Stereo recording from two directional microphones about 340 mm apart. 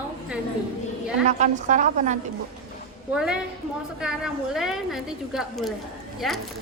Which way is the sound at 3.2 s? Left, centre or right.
Centre.